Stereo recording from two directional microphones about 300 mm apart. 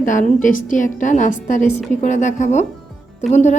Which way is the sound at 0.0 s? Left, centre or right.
Left.